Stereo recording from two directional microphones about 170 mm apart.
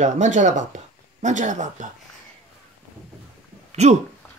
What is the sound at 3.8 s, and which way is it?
Speech, 40° right (ahead or behind).